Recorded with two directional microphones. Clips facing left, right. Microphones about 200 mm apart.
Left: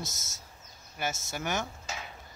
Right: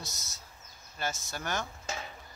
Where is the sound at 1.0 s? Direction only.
10° left (ahead or behind).